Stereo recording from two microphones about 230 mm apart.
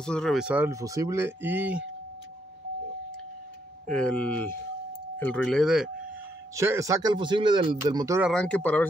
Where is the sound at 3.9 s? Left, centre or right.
Centre.